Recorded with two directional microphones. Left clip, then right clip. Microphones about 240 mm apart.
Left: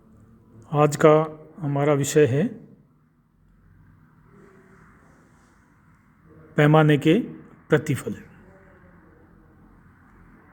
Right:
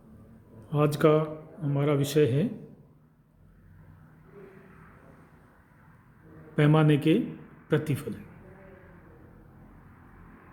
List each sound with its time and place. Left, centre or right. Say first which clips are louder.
0.7 s a man's voice: left 7 dB; left
6.6 s a man's voice: left 6 dB; left